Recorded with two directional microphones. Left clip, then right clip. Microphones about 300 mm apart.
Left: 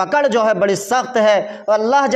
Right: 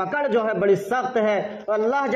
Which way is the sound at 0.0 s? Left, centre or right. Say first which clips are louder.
Left 7 dB; left.